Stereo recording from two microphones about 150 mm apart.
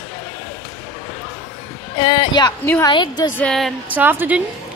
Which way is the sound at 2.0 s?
30° left (ahead or behind).